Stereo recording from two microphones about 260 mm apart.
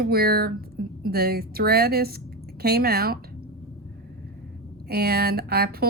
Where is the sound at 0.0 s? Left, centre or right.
Right.